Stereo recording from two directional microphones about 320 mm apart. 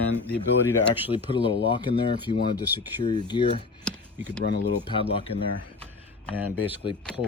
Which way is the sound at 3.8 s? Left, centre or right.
Centre.